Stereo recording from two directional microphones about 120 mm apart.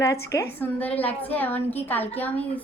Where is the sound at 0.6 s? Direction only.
15° left (ahead or behind).